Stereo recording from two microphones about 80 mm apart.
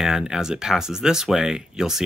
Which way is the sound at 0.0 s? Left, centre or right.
Centre.